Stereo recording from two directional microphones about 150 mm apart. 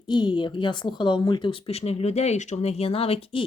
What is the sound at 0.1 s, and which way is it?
A woman's voice, 30° left (ahead or behind).